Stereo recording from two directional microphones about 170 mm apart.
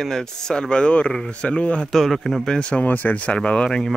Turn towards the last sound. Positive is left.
turn(degrees=5)  # may be behind; listen again after turning